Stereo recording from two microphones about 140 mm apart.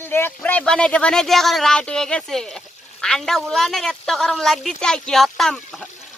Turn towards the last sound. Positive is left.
turn(degrees=5)  # may be behind; listen again after turning